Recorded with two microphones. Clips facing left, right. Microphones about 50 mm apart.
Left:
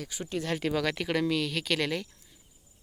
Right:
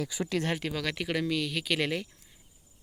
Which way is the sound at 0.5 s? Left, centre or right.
Centre.